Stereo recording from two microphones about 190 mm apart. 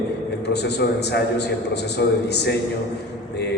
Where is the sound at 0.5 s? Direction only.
60° left (ahead or behind).